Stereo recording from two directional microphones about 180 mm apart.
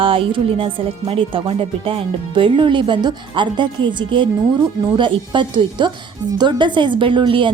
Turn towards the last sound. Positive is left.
turn(degrees=-25)  # may be behind; listen again after turning